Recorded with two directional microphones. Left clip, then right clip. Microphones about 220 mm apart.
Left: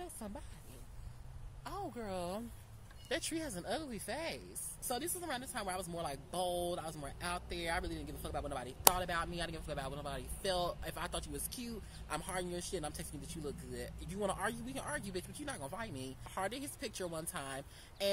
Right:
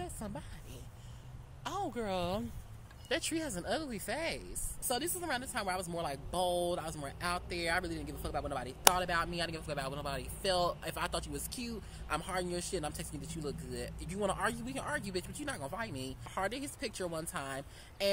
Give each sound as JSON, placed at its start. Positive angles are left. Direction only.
{"t": 0.0, "sound": "a sound", "side_deg": 0}
{"t": 1.6, "sound": "speech", "side_deg": -35}
{"t": 3.1, "sound": "a woman's voice", "side_deg": -5}